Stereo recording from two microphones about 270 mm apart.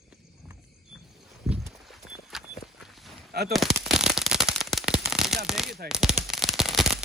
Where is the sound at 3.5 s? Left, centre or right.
Centre.